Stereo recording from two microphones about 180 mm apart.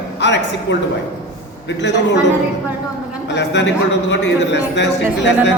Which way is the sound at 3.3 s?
75° left (ahead or behind).